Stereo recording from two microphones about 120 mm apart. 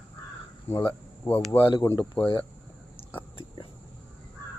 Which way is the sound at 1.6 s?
45° left (ahead or behind).